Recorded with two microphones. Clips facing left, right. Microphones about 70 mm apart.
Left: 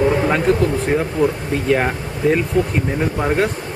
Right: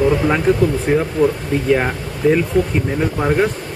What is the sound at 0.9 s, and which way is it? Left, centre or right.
Speech, centre.